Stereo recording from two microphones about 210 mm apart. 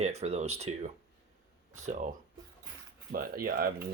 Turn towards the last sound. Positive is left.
turn(degrees=-45)  # may be behind; listen again after turning